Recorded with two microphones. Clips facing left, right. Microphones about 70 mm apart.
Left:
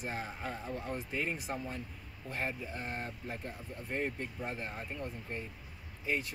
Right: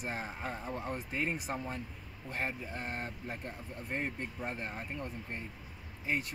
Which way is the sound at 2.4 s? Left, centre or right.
Centre.